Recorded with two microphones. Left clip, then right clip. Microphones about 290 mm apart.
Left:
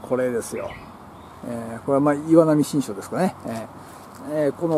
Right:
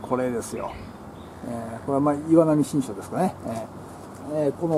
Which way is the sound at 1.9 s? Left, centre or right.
Centre.